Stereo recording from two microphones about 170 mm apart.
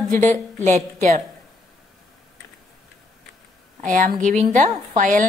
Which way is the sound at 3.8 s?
50° right (ahead or behind).